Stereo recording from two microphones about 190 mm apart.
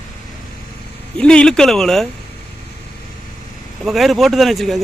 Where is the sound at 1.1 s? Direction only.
5° left (ahead or behind).